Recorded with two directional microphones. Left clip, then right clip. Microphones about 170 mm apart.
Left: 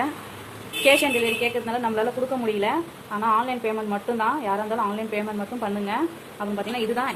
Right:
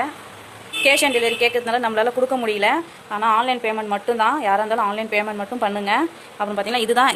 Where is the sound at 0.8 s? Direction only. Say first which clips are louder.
Right 2 dB; 35° right (ahead or behind).